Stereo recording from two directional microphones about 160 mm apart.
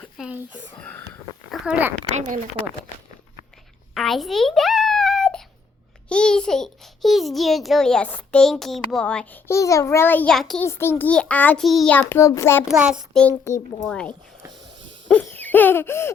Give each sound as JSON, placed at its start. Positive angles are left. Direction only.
{"t": 0.2, "sound": "speech", "side_deg": -10}
{"t": 0.8, "sound": "a child's voice", "side_deg": 10}
{"t": 1.5, "sound": "a sound", "side_deg": -5}
{"t": 2.1, "sound": "a woman's voice", "side_deg": -50}
{"t": 3.9, "sound": "a sound", "side_deg": 0}
{"t": 6.1, "sound": "a child's voice", "side_deg": 5}
{"t": 10.6, "sound": "a child's voice", "side_deg": 15}
{"t": 11.9, "sound": "a child's voice", "side_deg": 15}
{"t": 12.6, "sound": "a child's voice", "side_deg": -5}
{"t": 13.8, "sound": "a child's voice", "side_deg": 5}
{"t": 15.0, "sound": "hoot", "side_deg": 10}